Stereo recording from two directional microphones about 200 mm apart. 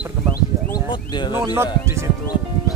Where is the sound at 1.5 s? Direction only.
10° right (ahead or behind).